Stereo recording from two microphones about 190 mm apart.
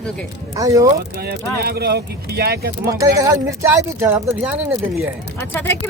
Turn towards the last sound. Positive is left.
turn(degrees=10)  # may be behind; listen again after turning